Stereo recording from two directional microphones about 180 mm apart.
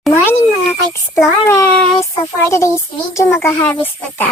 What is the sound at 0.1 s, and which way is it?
A child's voice, 15° left (ahead or behind).